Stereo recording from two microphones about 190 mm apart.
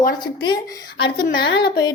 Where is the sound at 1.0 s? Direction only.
60° left (ahead or behind).